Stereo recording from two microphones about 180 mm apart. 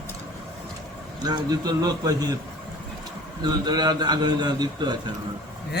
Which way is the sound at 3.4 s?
25° right (ahead or behind).